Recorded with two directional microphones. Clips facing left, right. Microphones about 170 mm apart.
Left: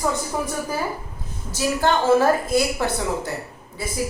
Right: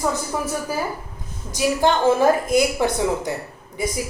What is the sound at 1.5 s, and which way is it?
A woman's voice, 15° right (ahead or behind).